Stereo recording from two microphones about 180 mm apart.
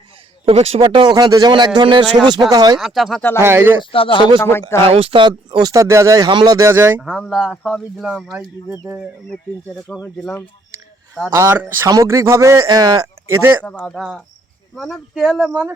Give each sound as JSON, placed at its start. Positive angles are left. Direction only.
{"t": 0.4, "sound": "speech", "side_deg": -35}
{"t": 2.7, "sound": "speech", "side_deg": 0}
{"t": 3.4, "sound": "a man's voice", "side_deg": -10}
{"t": 3.9, "sound": "speech", "side_deg": 30}
{"t": 4.4, "sound": "speech", "side_deg": 10}
{"t": 4.8, "sound": "a man's voice", "side_deg": -30}
{"t": 7.0, "sound": "speech", "side_deg": 0}
{"t": 8.4, "sound": "a man's voice", "side_deg": -15}
{"t": 9.3, "sound": "speech", "side_deg": 0}
{"t": 11.3, "sound": "a man's voice", "side_deg": -15}
{"t": 13.7, "sound": "speech", "side_deg": 5}